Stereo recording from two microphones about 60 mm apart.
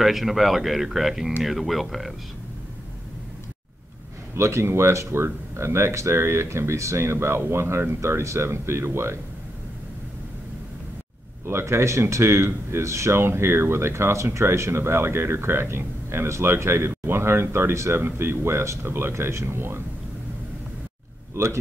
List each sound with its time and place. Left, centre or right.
0.0 s speech: centre
4.4 s speech: right
11.4 s speech: right
21.4 s speech: right